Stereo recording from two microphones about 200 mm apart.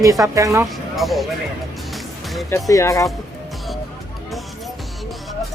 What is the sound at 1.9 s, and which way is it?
Music, centre (ahead or behind).